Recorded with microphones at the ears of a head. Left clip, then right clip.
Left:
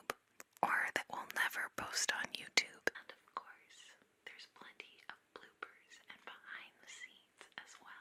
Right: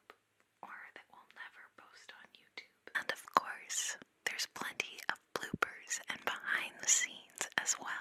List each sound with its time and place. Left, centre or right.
0.6 s whispering: left
2.9 s whispering: right